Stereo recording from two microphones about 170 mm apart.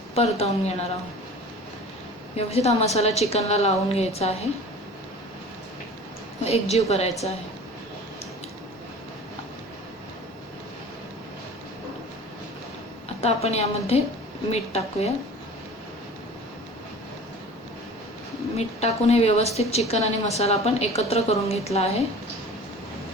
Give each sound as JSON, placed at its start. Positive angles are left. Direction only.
{"t": 0.1, "sound": "a woman's voice", "side_deg": 35}
{"t": 2.3, "sound": "a woman's voice", "side_deg": 35}
{"t": 6.4, "sound": "a woman's voice", "side_deg": 35}
{"t": 13.2, "sound": "a woman's voice", "side_deg": 40}
{"t": 18.5, "sound": "a woman's voice", "side_deg": 40}